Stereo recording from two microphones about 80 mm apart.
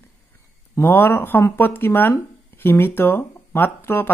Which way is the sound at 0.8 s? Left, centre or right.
Left.